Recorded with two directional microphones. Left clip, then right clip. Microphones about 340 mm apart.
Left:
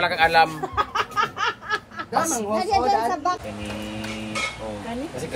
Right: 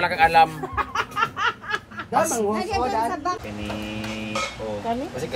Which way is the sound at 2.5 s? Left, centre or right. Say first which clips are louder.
Left 4 dB; left.